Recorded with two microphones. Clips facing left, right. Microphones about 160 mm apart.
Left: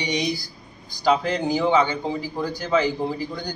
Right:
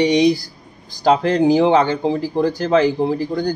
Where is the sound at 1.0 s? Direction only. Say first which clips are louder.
Right 6 dB; 50° right (ahead or behind).